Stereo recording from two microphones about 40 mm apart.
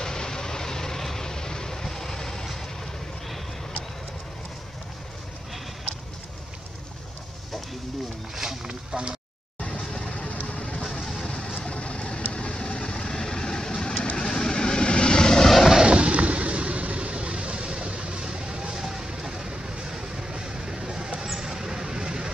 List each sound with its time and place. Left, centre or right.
0.0 s vehicle: centre
8.4 s a sound: centre
9.6 s vehicle: centre
10.4 s music: left
10.9 s music: centre
11.2 s vehicle: centre
15.8 s vehicle: right